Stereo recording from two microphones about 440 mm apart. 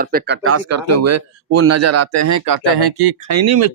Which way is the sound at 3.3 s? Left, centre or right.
Right.